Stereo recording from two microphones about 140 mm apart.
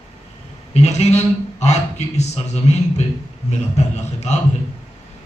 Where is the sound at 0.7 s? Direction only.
55° left (ahead or behind).